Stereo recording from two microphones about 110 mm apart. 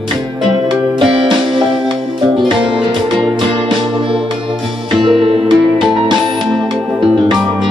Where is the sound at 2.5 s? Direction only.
50° right (ahead or behind).